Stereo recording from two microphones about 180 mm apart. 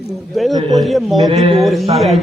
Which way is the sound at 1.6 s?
Centre (ahead or behind).